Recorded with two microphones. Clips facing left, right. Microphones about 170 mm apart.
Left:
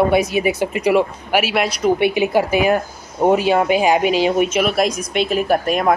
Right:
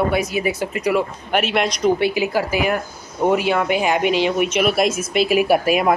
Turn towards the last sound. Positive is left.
turn(degrees=-5)  # may be behind; listen again after turning